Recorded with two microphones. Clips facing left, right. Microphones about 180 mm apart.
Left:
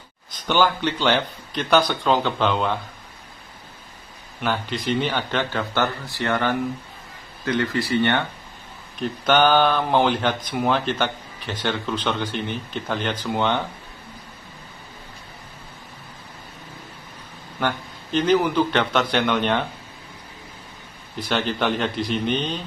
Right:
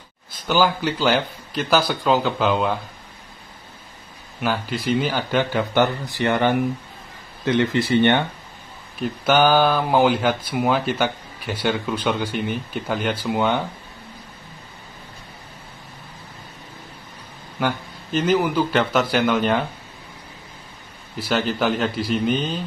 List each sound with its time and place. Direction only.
0.5 s a man's voice: 5° right (ahead or behind)
4.4 s speech: 5° right (ahead or behind)
9.0 s speech: 10° right (ahead or behind)
17.6 s a man's voice: 5° right (ahead or behind)
21.2 s a man's voice: 5° right (ahead or behind)